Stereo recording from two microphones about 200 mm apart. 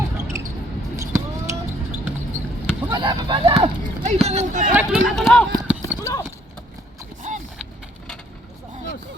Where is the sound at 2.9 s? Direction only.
25° right (ahead or behind).